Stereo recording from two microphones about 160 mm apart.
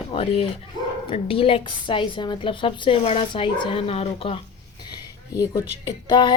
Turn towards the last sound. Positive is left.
turn(degrees=30)  # may be behind; listen again after turning